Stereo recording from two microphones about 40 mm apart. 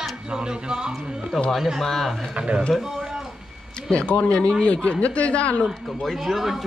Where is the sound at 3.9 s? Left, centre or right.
Left.